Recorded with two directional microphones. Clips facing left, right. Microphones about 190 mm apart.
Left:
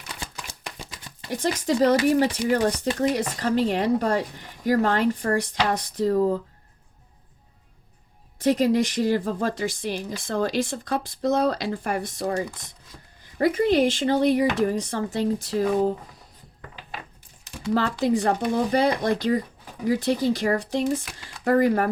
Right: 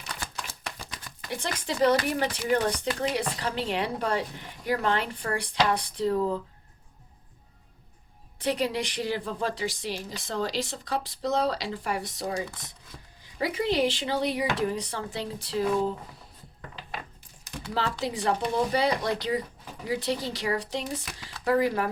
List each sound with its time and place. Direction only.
0.8 s a sound: 20° left (ahead or behind)
1.3 s speech: 40° left (ahead or behind)
8.4 s speech: 45° left (ahead or behind)
13.4 s speech: 50° left (ahead or behind)
17.7 s speech: 50° left (ahead or behind)
21.0 s speech: centre (ahead or behind)
21.2 s speech: 50° left (ahead or behind)